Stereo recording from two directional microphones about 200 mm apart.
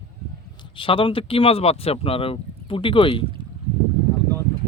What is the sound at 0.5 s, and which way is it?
Speech, 25° left (ahead or behind).